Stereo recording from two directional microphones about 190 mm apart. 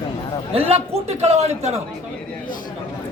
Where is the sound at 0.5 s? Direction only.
30° right (ahead or behind).